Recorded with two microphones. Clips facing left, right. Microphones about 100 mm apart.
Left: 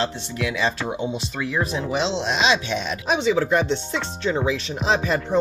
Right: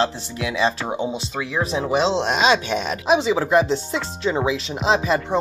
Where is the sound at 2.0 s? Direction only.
50° right (ahead or behind).